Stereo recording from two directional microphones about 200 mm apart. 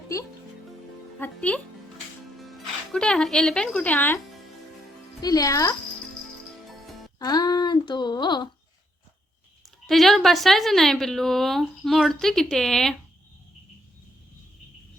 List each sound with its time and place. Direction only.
0.1 s speech: 15° left (ahead or behind)
5.2 s speech: 20° left (ahead or behind)
6.7 s music: centre (ahead or behind)
7.2 s a sound: 20° left (ahead or behind)
9.8 s a woman's voice: centre (ahead or behind)